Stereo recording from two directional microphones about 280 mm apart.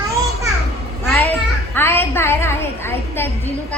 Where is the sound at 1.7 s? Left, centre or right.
Centre.